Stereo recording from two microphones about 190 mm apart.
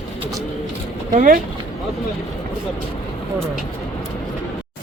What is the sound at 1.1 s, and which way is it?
Speech, 40° right (ahead or behind).